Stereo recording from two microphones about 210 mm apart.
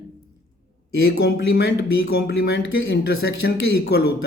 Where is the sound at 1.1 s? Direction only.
50° left (ahead or behind).